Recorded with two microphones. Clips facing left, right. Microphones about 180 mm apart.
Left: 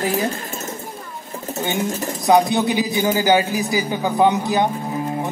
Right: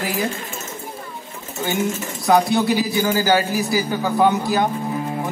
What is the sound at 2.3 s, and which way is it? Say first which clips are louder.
A man's voice: left 1 dB; 20° left (ahead or behind).